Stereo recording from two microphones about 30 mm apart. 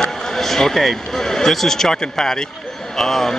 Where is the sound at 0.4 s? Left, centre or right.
Centre.